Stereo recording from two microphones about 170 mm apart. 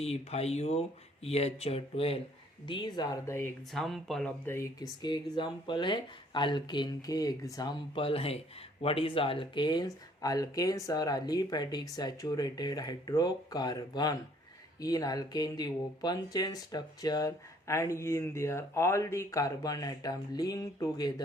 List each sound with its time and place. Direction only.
0.0 s speech: 40° left (ahead or behind); by 3.5 s 15° left (ahead or behind)
3.7 s speech: centre (ahead or behind)
4.4 s speech: 15° left (ahead or behind)
7.9 s speech: 35° left (ahead or behind)